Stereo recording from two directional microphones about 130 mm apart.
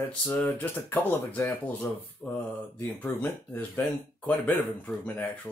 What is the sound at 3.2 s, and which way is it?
Speech, 15° left (ahead or behind).